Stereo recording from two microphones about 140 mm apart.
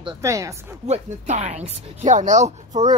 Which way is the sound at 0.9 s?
55° right (ahead or behind).